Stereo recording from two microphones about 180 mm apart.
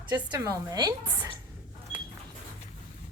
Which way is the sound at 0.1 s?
20° right (ahead or behind).